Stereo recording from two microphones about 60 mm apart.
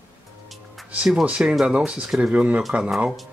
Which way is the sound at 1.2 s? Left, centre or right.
Centre.